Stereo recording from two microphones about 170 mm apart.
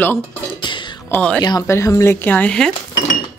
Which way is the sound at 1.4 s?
20° left (ahead or behind).